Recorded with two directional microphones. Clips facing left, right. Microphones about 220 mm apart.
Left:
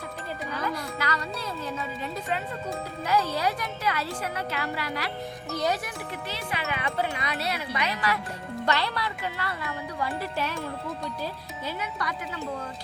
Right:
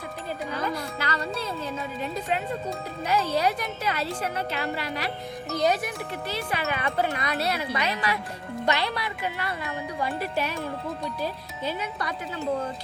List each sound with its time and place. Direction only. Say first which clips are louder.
0.9 s music: right 2 dB; 30° right (ahead or behind)
3.1 s speech: right 2 dB; 20° right (ahead or behind)
6.3 s speech: right 4 dB; 45° right (ahead or behind)
8.6 s speech: right 1 dB; 15° right (ahead or behind)